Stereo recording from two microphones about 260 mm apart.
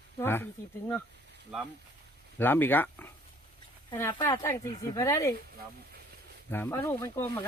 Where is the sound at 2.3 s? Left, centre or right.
Centre.